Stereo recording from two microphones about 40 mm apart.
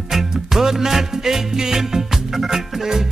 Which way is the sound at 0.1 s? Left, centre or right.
Centre.